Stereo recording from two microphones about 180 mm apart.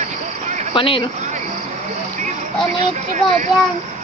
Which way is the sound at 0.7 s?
30° left (ahead or behind).